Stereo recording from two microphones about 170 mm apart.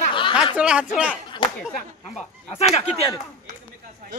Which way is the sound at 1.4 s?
30° left (ahead or behind).